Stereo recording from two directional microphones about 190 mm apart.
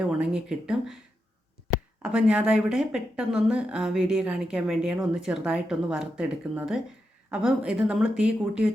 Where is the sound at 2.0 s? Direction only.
5° right (ahead or behind).